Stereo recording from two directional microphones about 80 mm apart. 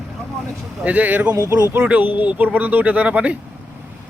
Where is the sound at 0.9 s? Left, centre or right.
Centre.